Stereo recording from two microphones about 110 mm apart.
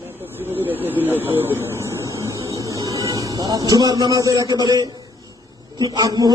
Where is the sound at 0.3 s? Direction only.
20° right (ahead or behind); by 4.9 s 35° right (ahead or behind).